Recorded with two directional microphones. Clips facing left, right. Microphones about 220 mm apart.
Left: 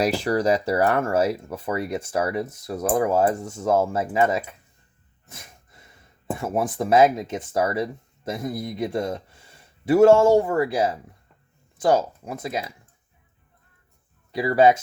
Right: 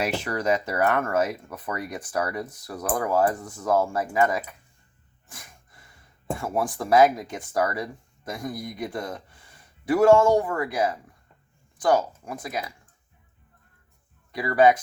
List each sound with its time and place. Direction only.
0.0 s speech: 35° left (ahead or behind)
5.3 s gasp: 25° left (ahead or behind)
6.4 s speech: 20° left (ahead or behind)
14.3 s speech: 25° left (ahead or behind)